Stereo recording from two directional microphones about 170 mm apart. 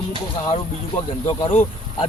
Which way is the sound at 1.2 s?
25° left (ahead or behind).